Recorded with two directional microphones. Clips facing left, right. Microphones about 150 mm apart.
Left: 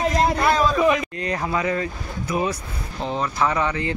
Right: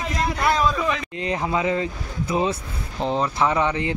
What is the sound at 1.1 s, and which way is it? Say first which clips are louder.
Speech: right 1 dB; 20° right (ahead or behind).